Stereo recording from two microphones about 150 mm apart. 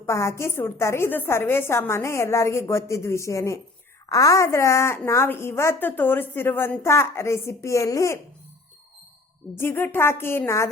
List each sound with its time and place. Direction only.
0.0 s a woman's voice: 20° left (ahead or behind)
9.6 s a woman's voice: 15° left (ahead or behind)